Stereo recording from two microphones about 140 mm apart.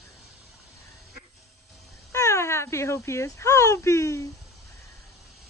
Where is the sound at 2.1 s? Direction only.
20° left (ahead or behind).